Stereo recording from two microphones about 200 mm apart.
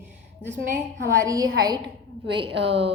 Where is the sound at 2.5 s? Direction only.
60° right (ahead or behind).